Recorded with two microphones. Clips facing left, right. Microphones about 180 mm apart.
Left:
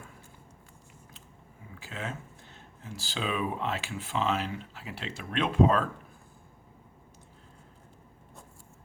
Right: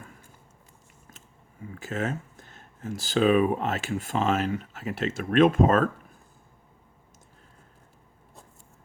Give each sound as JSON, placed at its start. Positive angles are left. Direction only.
{"t": 1.8, "sound": "speech", "side_deg": -45}